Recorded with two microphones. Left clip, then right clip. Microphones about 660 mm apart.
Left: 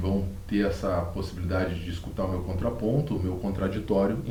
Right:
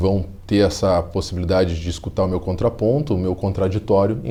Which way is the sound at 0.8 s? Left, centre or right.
Right.